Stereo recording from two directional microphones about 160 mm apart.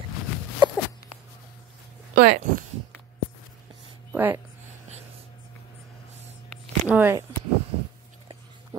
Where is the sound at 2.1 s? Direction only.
75° right (ahead or behind).